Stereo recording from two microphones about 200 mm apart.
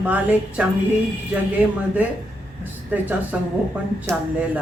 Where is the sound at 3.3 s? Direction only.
5° right (ahead or behind).